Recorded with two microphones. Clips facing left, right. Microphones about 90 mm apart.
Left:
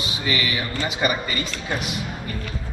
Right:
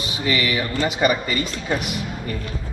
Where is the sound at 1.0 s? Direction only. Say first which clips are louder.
Right 4 dB; 35° right (ahead or behind).